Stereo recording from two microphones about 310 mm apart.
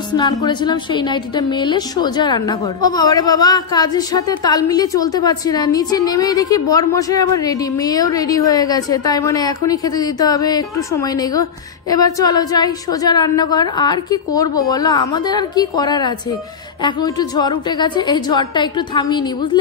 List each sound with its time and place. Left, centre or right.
0.1 s a woman's voice: centre